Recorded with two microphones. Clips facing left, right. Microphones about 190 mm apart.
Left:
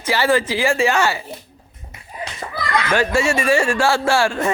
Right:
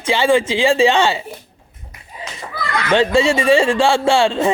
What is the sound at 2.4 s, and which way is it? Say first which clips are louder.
Speech: even; 55° left (ahead or behind).